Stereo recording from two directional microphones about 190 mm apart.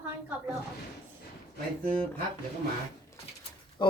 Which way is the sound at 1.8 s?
50° right (ahead or behind).